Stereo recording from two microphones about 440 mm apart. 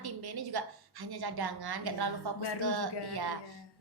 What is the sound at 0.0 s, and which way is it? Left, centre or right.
A woman's voice, right.